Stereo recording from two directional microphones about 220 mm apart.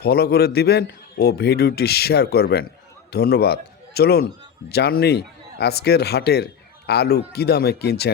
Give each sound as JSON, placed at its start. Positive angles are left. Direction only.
{"t": 0.0, "sound": "a man's voice", "side_deg": 45}